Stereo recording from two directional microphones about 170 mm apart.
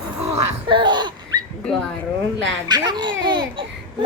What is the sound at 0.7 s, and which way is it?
Laughter, 25° right (ahead or behind).